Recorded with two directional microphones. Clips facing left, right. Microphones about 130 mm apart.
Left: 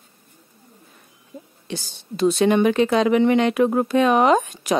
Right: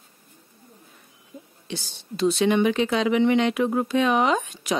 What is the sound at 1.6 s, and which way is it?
A woman's voice, 45° left (ahead or behind).